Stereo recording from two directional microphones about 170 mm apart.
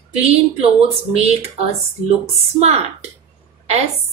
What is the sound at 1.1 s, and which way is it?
A woman's voice, 40° right (ahead or behind).